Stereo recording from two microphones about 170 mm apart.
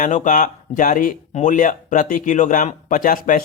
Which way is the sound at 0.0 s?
50° left (ahead or behind).